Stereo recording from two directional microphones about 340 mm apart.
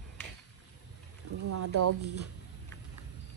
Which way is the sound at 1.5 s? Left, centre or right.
Right.